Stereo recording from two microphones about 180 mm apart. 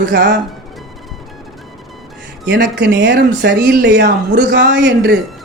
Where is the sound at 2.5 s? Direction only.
70° right (ahead or behind).